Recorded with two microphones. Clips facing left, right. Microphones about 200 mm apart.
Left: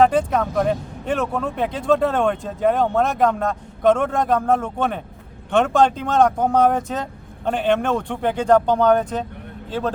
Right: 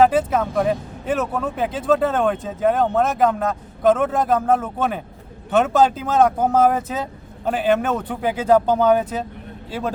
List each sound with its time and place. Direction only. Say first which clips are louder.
0.0 s speech: even; 5° right (ahead or behind)